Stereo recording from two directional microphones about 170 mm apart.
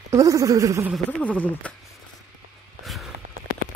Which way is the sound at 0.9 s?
10° left (ahead or behind).